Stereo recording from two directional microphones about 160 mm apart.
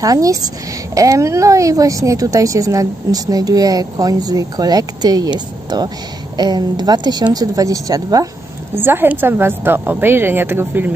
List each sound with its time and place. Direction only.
0.0 s a woman's voice: 20° right (ahead or behind)